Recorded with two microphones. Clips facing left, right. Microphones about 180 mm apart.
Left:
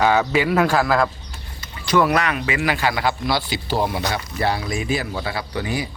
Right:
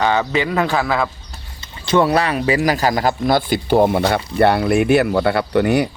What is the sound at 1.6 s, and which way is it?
Speech, 25° right (ahead or behind).